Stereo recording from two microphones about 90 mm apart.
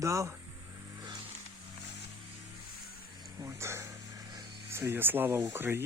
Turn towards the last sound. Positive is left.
turn(degrees=-25)  # may be behind; listen again after turning